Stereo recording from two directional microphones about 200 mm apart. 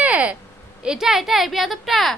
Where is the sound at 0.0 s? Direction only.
5° right (ahead or behind).